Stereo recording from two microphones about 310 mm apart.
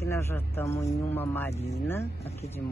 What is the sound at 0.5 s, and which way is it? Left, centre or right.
Speech, centre.